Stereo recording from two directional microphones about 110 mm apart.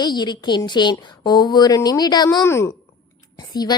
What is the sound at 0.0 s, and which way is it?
A woman's voice, 40° left (ahead or behind).